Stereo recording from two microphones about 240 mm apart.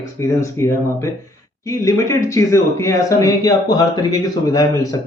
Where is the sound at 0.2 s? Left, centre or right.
Centre.